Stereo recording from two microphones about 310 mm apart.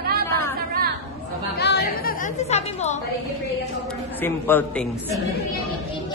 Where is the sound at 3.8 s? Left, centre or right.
Centre.